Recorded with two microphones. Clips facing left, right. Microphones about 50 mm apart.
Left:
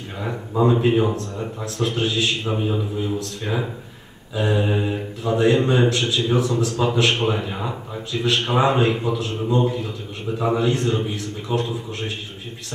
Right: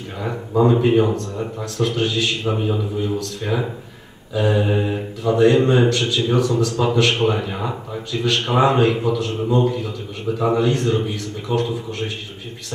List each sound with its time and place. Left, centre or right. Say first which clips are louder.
0.2 s speech: right 3 dB; centre